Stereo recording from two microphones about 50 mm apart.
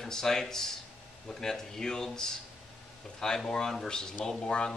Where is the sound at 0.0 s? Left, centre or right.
Centre.